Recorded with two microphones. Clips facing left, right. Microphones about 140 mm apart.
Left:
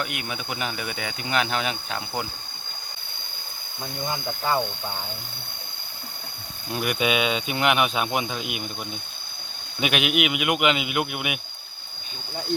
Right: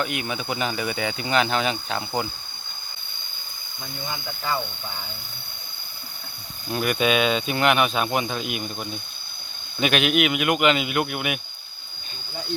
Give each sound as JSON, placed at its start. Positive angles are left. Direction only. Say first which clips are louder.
{"t": 0.0, "sound": "speech", "louder": "right 4 dB", "side_deg": 5}
{"t": 4.0, "sound": "speech", "louder": "left 4 dB", "side_deg": 45}
{"t": 4.5, "sound": "speech", "louder": "left 3 dB", "side_deg": 30}
{"t": 6.7, "sound": "speech", "louder": "right 2 dB", "side_deg": 10}